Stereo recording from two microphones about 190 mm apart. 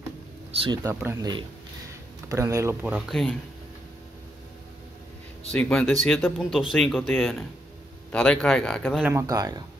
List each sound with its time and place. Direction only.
0.5 s speech: 30° right (ahead or behind)
0.8 s speech: 20° right (ahead or behind); by 3.3 s centre (ahead or behind)
5.5 s speech: 5° left (ahead or behind)
9.0 s speech: 15° right (ahead or behind)